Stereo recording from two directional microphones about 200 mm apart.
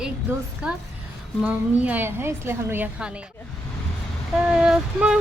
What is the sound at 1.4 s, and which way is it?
A woman's voice, 5° right (ahead or behind).